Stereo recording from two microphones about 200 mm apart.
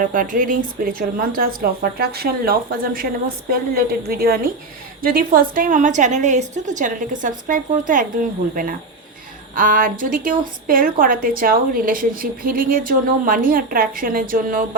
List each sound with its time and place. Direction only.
0.1 s a woman's voice: 45° right (ahead or behind)